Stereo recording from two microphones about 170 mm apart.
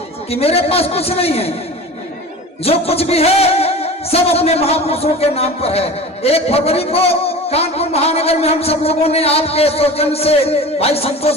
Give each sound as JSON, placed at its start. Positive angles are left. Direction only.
{"t": 0.3, "sound": "music", "side_deg": 35}
{"t": 2.6, "sound": "music", "side_deg": 35}